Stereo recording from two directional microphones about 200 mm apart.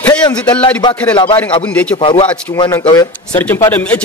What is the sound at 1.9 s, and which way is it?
Speech, 25° left (ahead or behind).